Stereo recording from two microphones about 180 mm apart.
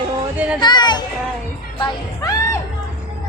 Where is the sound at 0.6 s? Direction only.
25° left (ahead or behind).